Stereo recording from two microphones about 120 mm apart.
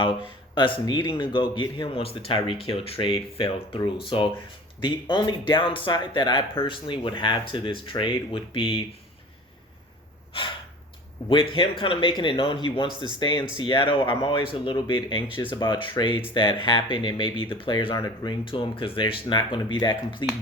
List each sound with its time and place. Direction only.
0.0 s speech: 45° left (ahead or behind)
10.3 s speech: 50° left (ahead or behind); by 18.3 s 30° left (ahead or behind)
18.4 s speech: 45° left (ahead or behind)